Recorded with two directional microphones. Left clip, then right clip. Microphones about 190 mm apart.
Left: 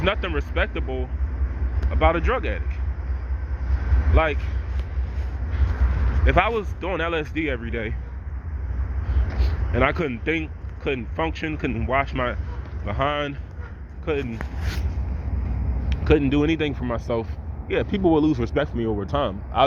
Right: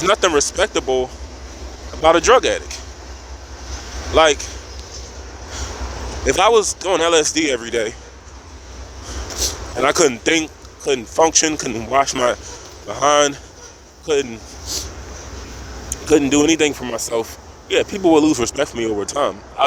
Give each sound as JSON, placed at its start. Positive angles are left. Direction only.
{"t": 0.1, "sound": "speech", "side_deg": -85}
{"t": 2.0, "sound": "speech", "side_deg": -65}
{"t": 4.1, "sound": "speech", "side_deg": -65}
{"t": 6.2, "sound": "speech", "side_deg": -90}
{"t": 6.8, "sound": "speech", "side_deg": -65}
{"t": 9.4, "sound": "speech", "side_deg": -80}
{"t": 14.1, "sound": "speech", "side_deg": -75}
{"t": 15.9, "sound": "speech", "side_deg": -70}